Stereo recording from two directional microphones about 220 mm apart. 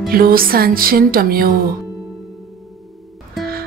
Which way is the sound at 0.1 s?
40° right (ahead or behind).